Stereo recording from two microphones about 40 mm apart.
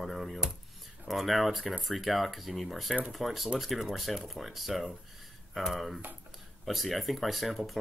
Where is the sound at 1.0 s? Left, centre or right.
Centre.